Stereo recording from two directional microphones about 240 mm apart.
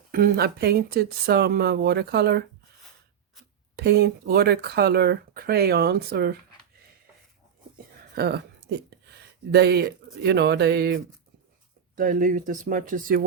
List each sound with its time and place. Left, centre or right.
0.1 s speech: right
3.8 s speech: right
8.1 s speech: right
9.5 s speech: right